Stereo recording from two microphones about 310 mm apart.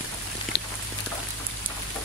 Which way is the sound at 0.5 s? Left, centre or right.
Left.